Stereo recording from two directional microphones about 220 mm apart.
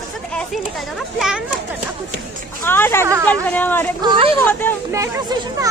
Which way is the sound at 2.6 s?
10° left (ahead or behind).